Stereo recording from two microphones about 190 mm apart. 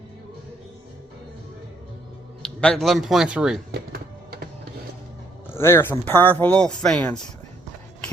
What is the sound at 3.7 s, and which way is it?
Music, 55° right (ahead or behind).